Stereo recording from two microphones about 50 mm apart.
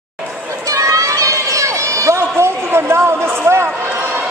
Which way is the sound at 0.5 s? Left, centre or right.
Right.